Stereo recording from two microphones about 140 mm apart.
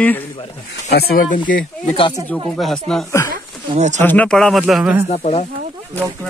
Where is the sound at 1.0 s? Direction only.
80° left.